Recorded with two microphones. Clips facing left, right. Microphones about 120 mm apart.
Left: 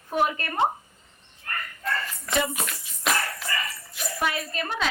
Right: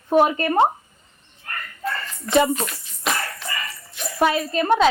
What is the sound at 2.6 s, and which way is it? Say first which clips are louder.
Dog: right 2 dB; centre (ahead or behind).